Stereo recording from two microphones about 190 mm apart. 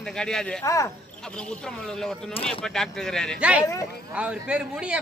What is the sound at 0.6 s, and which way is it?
Speech, 15° left (ahead or behind).